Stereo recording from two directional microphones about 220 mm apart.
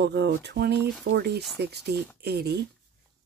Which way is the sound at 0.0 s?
50° right (ahead or behind).